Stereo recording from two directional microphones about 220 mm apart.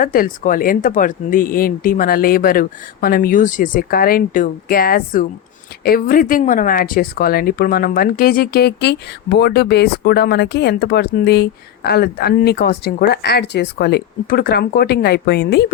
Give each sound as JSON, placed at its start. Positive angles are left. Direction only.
{"t": 0.0, "sound": "a woman's voice", "side_deg": 40}